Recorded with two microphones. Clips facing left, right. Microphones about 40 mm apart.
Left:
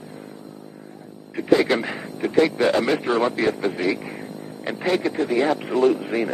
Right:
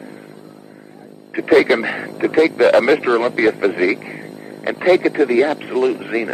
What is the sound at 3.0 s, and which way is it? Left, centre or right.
Speech, centre.